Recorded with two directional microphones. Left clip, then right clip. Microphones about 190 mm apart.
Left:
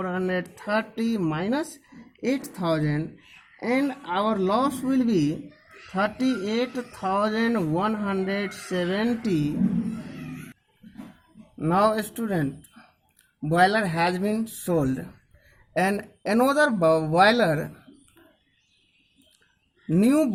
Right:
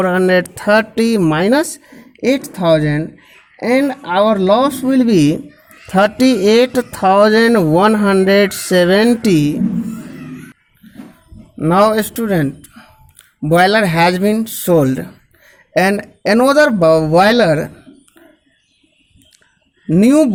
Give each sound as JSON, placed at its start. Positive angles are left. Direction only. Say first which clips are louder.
{"t": 0.0, "sound": "speech", "louder": "right 15 dB", "side_deg": -40}
{"t": 11.5, "sound": "speech", "louder": "right 10 dB", "side_deg": -30}
{"t": 19.9, "sound": "speech", "louder": "right 11 dB", "side_deg": -20}